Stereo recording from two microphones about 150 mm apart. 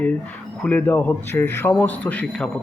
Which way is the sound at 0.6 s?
10° left (ahead or behind).